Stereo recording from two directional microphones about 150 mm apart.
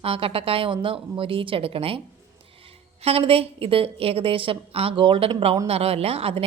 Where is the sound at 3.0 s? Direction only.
40° right (ahead or behind).